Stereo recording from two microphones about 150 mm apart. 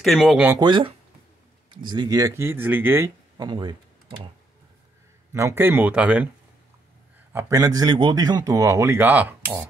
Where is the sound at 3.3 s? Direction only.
30° right (ahead or behind).